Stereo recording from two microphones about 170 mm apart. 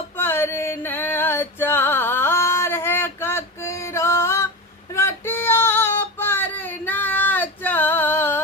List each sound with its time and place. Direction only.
0.2 s music: 15° left (ahead or behind)
4.9 s female singing: 15° left (ahead or behind)